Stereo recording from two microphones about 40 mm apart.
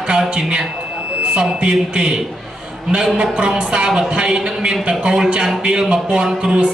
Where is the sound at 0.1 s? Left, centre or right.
Centre.